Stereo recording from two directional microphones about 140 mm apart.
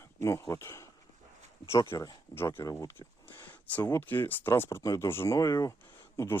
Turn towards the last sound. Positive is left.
turn(degrees=20)  # may be behind; listen again after turning